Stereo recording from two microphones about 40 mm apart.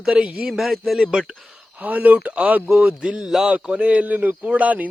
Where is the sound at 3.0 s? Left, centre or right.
Right.